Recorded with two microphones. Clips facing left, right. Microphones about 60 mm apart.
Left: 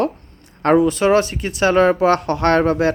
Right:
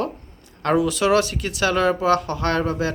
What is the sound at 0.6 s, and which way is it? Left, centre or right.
Speech, left.